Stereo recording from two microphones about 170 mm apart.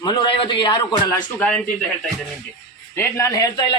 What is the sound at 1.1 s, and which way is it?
Speech, 10° left (ahead or behind).